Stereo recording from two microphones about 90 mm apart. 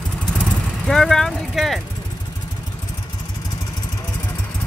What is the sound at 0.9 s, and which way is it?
Vehicle, 5° left (ahead or behind).